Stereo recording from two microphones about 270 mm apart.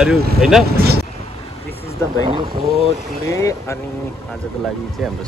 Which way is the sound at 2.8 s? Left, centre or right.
Centre.